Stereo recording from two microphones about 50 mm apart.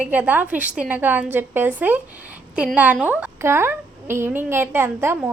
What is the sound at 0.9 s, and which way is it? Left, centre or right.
A woman's voice, right.